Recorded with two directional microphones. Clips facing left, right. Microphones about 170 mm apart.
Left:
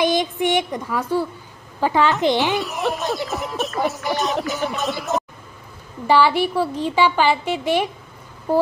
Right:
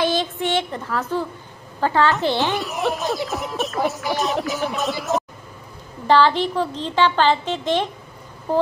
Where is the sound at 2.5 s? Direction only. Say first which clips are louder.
Even; centre (ahead or behind).